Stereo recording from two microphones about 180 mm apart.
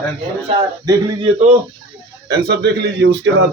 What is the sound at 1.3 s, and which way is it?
Speech, 40° right (ahead or behind).